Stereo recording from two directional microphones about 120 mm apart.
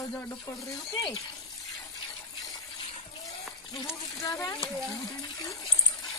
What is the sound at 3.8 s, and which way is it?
Child singing, 25° left (ahead or behind).